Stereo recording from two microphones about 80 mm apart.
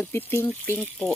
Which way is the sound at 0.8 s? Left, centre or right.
Centre.